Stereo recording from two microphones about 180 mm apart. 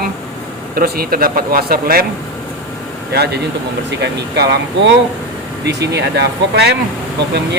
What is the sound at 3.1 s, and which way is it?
Speech, 65° right (ahead or behind).